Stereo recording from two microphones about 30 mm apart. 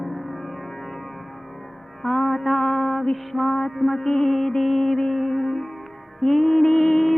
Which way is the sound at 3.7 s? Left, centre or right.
Centre.